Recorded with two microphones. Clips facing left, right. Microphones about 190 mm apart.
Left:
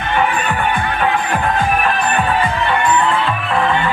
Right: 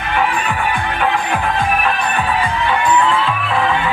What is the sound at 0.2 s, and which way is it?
Music, centre (ahead or behind).